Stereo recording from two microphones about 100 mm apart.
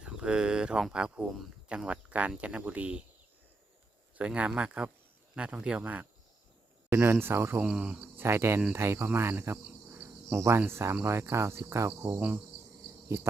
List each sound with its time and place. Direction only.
0.0 s speech: 10° right (ahead or behind)
4.2 s speech: 10° right (ahead or behind)
6.9 s cricket: 25° right (ahead or behind)
7.6 s cricket: 10° right (ahead or behind); by 12.2 s 30° right (ahead or behind)